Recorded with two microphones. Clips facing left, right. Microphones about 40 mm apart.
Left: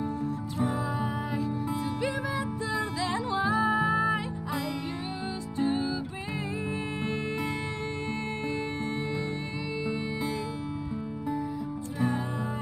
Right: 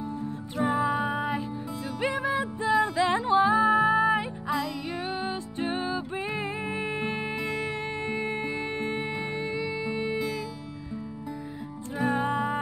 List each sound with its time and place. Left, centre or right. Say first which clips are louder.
0.2 s music: right 1 dB; right
5.2 s music: left 1 dB; right
6.7 s music: right 2 dB; centre
12.1 s music: right 5 dB; right